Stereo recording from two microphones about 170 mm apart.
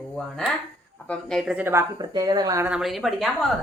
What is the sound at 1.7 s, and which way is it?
Speech, 20° right (ahead or behind).